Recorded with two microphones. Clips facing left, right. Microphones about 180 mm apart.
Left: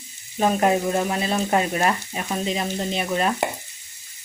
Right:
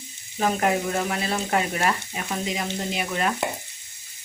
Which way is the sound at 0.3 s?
25° left (ahead or behind).